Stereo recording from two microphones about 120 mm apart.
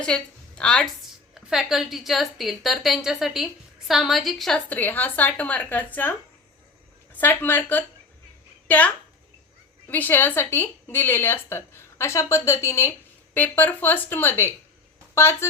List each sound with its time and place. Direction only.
0.0 s a woman's voice: 5° left (ahead or behind)
1.5 s a woman's voice: 5° right (ahead or behind)
4.7 s a woman's voice: 15° left (ahead or behind)